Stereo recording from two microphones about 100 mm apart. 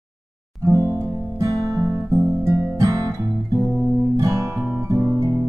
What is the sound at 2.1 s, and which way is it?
Music, 30° right (ahead or behind).